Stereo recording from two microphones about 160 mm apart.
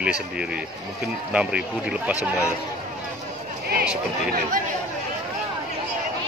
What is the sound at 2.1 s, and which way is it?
Speech, 15° left (ahead or behind).